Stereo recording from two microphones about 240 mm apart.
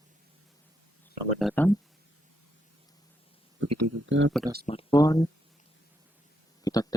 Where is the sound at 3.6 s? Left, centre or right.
Right.